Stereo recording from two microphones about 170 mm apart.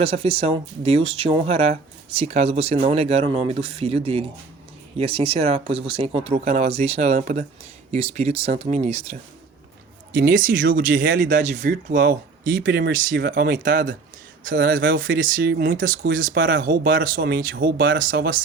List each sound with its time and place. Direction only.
0.0 s speech: 35° right (ahead or behind)
10.1 s speech: 55° right (ahead or behind)